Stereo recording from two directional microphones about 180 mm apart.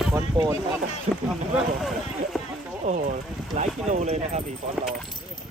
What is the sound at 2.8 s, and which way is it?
Speech, 45° right (ahead or behind).